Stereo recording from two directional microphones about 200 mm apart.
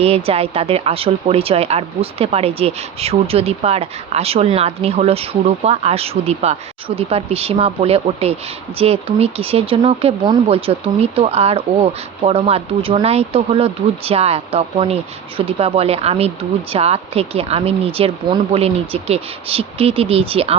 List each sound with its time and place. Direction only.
0.0 s speech: 30° right (ahead or behind)